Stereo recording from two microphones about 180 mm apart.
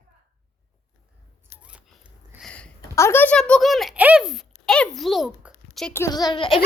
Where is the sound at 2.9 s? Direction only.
15° left (ahead or behind).